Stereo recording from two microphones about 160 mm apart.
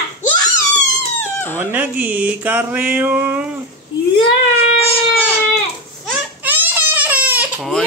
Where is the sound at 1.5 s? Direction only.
15° right (ahead or behind).